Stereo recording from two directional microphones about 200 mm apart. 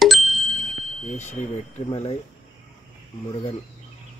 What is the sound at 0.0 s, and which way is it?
Bicycle bell, centre (ahead or behind).